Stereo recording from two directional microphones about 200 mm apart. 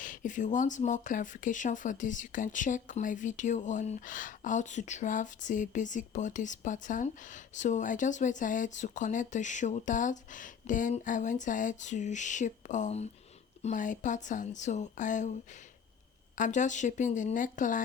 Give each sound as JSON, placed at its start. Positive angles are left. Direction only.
{"t": 0.0, "sound": "speech", "side_deg": 40}
{"t": 16.4, "sound": "speech", "side_deg": 40}